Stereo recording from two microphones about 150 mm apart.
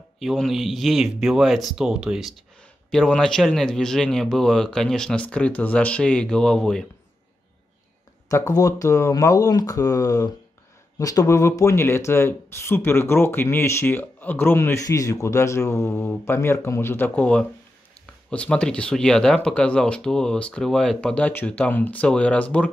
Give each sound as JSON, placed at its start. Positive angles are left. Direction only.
{"t": 0.2, "sound": "a man's voice", "side_deg": 0}
{"t": 8.3, "sound": "speech", "side_deg": 20}